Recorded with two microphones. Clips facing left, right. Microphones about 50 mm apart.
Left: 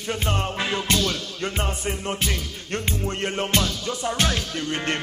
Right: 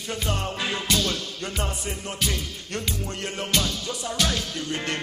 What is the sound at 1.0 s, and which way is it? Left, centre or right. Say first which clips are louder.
Music: left 2 dB; left.